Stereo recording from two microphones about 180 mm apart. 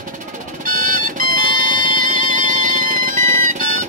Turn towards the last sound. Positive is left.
turn(degrees=-50)  # may be behind; listen again after turning